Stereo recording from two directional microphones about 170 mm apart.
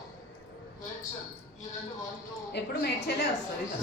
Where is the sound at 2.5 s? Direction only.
80° left.